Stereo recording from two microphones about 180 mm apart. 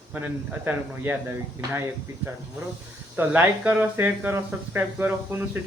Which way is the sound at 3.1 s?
10° right (ahead or behind).